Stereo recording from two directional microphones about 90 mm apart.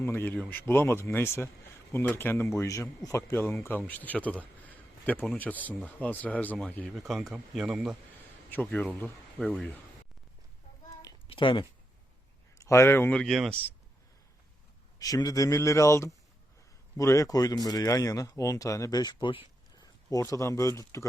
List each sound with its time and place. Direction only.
0.0 s speech: 25° left (ahead or behind)
6.9 s speech: centre (ahead or behind)
8.7 s speech: 20° left (ahead or behind)
11.3 s speech: 70° left (ahead or behind)
12.5 s speech: 35° left (ahead or behind)
13.1 s speech: 10° left (ahead or behind)
14.9 s speech: 45° left (ahead or behind)
19.2 s speech: 70° left (ahead or behind)
19.8 s speech: 40° left (ahead or behind)